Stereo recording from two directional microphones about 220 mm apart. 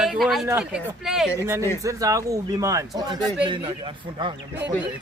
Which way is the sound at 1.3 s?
10° right (ahead or behind).